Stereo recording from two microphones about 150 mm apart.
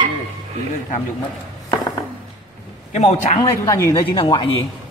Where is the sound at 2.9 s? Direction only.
45° left (ahead or behind).